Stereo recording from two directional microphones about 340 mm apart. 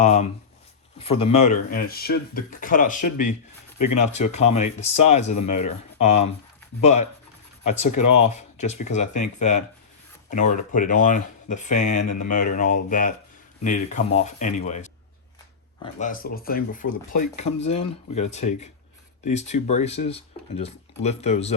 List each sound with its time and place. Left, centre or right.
0.0 s speech: centre
7.9 s speech: left
8.3 s speech: centre